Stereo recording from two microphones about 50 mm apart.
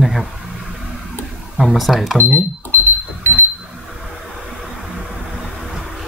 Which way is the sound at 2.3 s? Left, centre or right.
Left.